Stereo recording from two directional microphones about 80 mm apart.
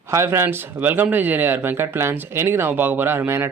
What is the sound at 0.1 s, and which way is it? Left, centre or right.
Speech, right.